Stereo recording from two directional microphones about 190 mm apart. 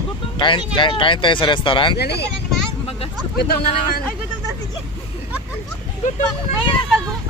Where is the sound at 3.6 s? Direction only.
30° left (ahead or behind).